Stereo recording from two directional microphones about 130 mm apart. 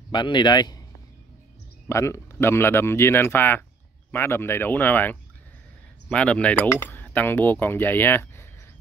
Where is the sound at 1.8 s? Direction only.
20° left (ahead or behind).